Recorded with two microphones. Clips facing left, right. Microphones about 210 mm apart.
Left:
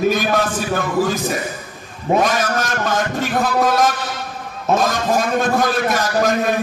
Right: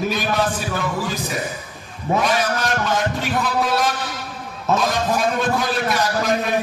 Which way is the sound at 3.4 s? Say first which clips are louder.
Left 5 dB; 45° left (ahead or behind).